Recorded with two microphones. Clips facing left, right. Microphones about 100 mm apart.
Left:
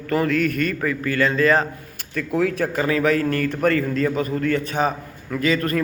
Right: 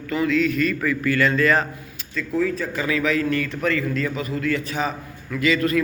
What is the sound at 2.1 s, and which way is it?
Speech, 65° left (ahead or behind).